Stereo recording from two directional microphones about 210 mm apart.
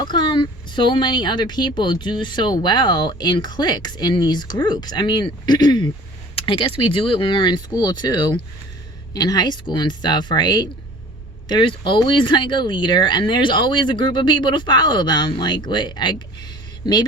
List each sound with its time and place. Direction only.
0.0 s a woman's voice: 20° left (ahead or behind)